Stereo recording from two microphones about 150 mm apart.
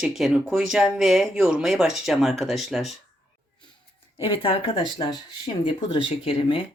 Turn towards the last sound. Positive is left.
turn(degrees=35)  # may be behind; listen again after turning